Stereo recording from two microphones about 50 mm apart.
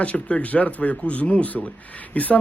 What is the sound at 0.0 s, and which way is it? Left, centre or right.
Speech, left.